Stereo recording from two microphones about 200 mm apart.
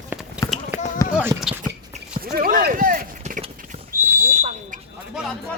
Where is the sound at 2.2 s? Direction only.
45° right (ahead or behind).